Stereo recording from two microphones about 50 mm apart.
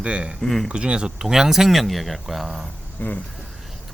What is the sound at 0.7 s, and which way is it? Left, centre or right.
Speech, right.